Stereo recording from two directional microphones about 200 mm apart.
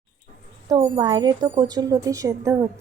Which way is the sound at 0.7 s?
20° right (ahead or behind).